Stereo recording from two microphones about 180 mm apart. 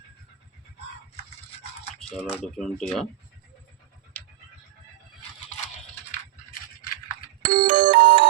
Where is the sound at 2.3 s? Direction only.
5° left (ahead or behind).